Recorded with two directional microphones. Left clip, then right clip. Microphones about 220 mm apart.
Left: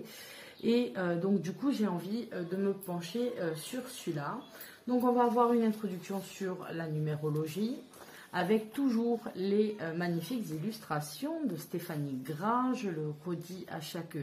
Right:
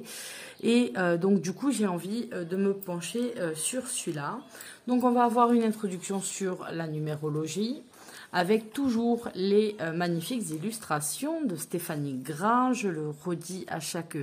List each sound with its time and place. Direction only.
0.7 s speech: 45° right (ahead or behind)